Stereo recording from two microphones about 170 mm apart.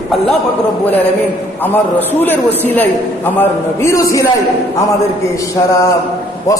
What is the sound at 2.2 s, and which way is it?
A man's voice, 10° left (ahead or behind).